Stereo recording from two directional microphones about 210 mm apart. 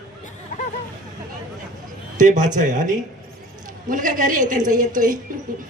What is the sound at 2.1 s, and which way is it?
A man's voice, 35° right (ahead or behind).